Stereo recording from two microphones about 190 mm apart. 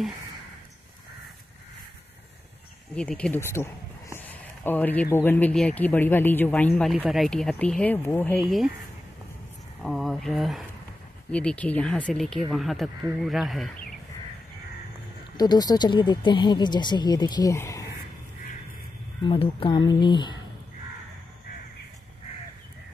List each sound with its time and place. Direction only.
3.0 s speech: 5° left (ahead or behind)
4.3 s a sound: 10° left (ahead or behind)
5.1 s speech: 10° left (ahead or behind)
9.8 s speech: centre (ahead or behind)
15.3 s speech: 20° left (ahead or behind)
19.2 s speech: 30° left (ahead or behind)